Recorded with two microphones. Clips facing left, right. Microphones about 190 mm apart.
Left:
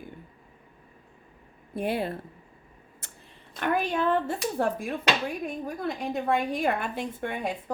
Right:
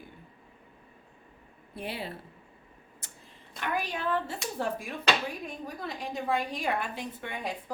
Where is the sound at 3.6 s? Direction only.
55° left (ahead or behind).